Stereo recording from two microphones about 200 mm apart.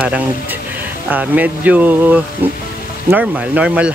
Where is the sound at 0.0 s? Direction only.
5° right (ahead or behind).